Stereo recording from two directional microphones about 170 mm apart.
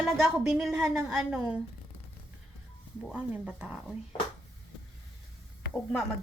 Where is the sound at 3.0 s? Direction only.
5° right (ahead or behind).